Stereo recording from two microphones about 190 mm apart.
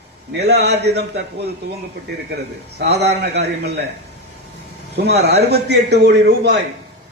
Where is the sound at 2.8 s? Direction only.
60° right (ahead or behind).